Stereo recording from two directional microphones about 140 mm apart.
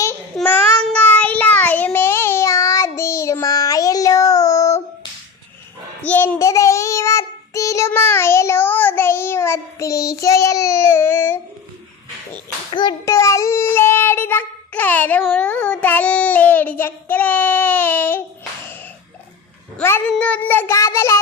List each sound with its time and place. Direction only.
0.3 s child singing: 10° left (ahead or behind)
6.0 s child singing: 10° left (ahead or behind)
12.7 s child singing: 30° left (ahead or behind); by 18.2 s 15° left (ahead or behind)
19.7 s child singing: 10° left (ahead or behind)